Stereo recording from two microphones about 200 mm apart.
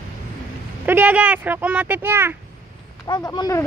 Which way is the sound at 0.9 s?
10° right (ahead or behind).